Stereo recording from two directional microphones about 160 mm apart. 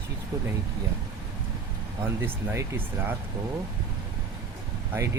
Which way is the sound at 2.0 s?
15° right (ahead or behind).